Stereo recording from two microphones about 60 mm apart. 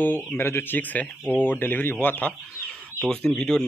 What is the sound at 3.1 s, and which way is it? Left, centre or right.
Speech, centre.